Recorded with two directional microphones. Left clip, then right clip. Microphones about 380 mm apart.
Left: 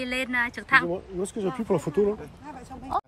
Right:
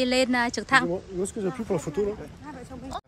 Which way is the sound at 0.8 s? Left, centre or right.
Left.